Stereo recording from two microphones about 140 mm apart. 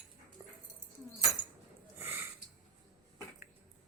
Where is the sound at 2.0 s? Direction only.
15° right (ahead or behind).